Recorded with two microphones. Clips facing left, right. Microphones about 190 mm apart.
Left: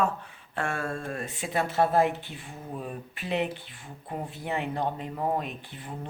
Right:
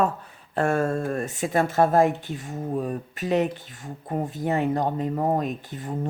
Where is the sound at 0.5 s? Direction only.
40° right (ahead or behind).